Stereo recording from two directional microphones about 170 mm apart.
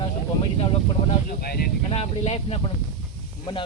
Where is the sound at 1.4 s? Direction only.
65° left (ahead or behind).